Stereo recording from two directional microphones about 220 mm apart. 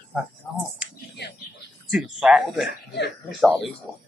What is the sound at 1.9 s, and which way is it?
Speech, centre (ahead or behind).